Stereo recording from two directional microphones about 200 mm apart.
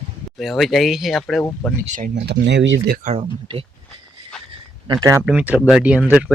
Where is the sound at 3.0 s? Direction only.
30° right (ahead or behind).